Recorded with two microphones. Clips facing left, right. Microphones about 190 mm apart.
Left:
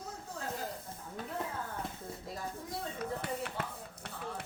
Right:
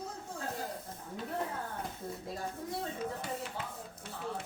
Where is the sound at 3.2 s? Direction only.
60° left (ahead or behind).